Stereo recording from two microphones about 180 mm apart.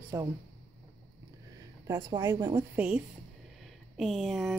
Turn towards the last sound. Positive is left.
turn(degrees=0)  # may be behind; listen again after turning